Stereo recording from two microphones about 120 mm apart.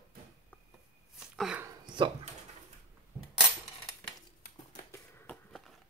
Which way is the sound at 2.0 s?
45° right (ahead or behind).